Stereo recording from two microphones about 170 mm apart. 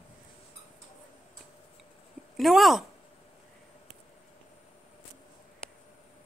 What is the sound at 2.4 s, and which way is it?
Speech, centre (ahead or behind).